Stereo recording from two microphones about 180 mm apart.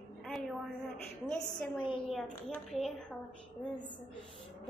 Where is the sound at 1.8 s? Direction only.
30° left (ahead or behind).